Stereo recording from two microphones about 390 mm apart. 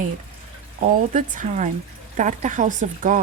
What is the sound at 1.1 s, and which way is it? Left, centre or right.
Speech, centre.